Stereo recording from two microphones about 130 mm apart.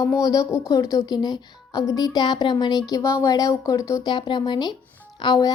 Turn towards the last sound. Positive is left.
turn(degrees=30)  # may be behind; listen again after turning